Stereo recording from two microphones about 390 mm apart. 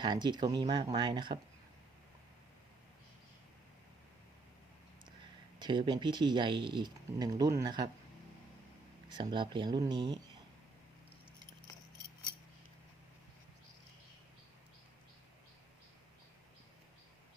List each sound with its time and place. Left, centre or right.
0.0 s speech: centre
5.5 s speech: centre
9.0 s speech: centre